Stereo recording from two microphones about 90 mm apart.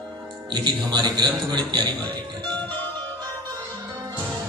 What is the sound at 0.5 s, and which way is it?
A man's voice, 55° right (ahead or behind).